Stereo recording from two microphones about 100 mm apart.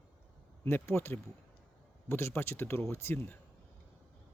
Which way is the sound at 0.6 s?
25° left (ahead or behind).